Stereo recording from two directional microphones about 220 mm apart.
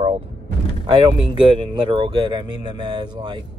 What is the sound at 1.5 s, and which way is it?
Speech, 25° right (ahead or behind).